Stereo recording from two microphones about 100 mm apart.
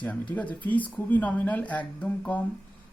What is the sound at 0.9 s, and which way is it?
Speech, 15° left (ahead or behind).